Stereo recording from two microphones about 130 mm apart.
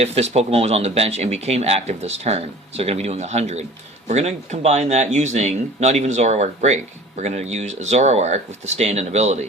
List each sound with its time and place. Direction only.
0.0 s speech: 55° right (ahead or behind)